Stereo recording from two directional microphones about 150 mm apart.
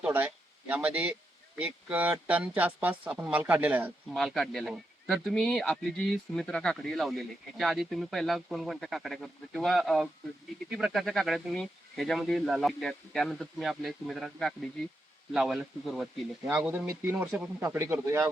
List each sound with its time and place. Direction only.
0.0 s speech: 10° right (ahead or behind)
4.1 s speech: centre (ahead or behind); by 18.3 s 15° right (ahead or behind)